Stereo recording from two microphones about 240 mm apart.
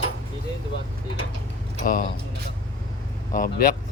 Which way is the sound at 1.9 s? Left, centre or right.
Left.